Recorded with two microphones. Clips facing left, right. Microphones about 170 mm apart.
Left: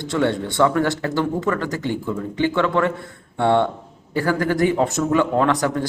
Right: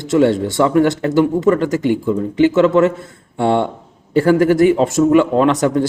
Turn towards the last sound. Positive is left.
turn(degrees=-20)  # may be behind; listen again after turning